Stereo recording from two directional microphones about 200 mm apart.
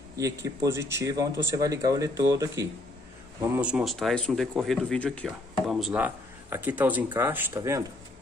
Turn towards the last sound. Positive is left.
turn(degrees=-15)  # may be behind; listen again after turning